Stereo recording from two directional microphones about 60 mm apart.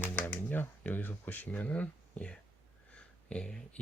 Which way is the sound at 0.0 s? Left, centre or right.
Left.